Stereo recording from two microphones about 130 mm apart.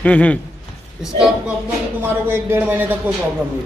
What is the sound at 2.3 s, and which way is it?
Speech, 15° right (ahead or behind).